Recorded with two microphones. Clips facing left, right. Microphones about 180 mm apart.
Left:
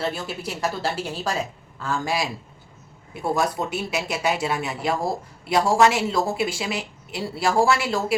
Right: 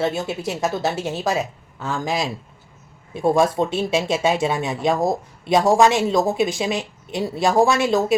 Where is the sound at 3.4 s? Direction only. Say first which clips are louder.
Right 5 dB; 25° right (ahead or behind).